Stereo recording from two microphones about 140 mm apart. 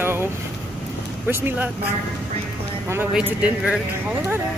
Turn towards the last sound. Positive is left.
turn(degrees=-5)  # may be behind; listen again after turning